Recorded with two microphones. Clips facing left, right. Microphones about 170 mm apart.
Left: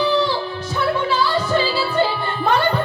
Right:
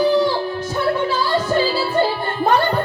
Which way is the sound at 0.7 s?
50° right (ahead or behind).